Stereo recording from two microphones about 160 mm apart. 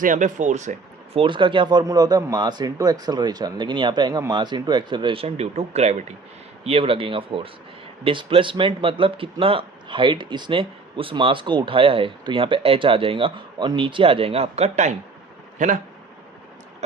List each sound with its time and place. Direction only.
0.0 s speech: 50° right (ahead or behind)
1.2 s speech: 30° right (ahead or behind); by 15.8 s 50° right (ahead or behind)